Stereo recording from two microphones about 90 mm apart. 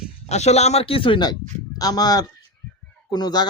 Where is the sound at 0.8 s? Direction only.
85° left.